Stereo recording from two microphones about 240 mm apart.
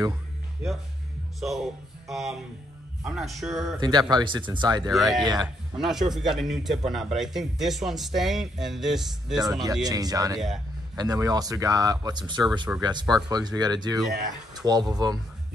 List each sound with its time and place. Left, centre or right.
1.4 s speech: centre
3.8 s speech: centre
4.9 s speech: centre
5.2 s speech: centre
5.8 s speech: centre
9.4 s speech: centre
12.7 s speech: centre